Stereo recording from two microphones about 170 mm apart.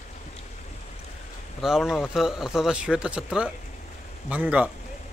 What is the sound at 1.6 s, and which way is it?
A man's voice, centre (ahead or behind).